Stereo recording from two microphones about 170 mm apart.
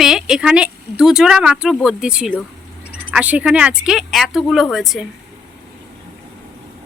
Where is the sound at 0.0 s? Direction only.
5° right (ahead or behind).